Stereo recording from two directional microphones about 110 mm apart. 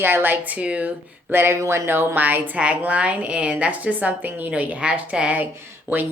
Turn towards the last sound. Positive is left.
turn(degrees=-15)  # may be behind; listen again after turning